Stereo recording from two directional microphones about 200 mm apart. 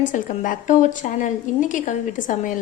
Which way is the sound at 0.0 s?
40° left (ahead or behind).